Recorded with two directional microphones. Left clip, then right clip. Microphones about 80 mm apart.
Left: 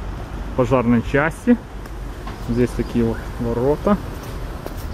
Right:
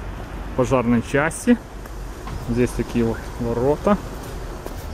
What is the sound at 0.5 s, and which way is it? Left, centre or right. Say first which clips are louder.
Speech: left 2 dB; centre.